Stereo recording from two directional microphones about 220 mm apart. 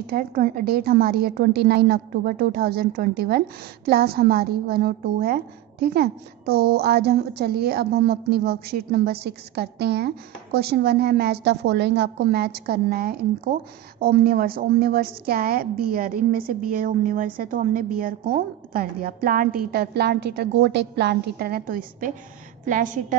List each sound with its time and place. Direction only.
0.0 s a woman's voice: 40° right (ahead or behind)